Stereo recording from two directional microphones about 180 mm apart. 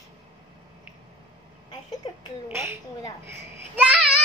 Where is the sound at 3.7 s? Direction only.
10° right (ahead or behind).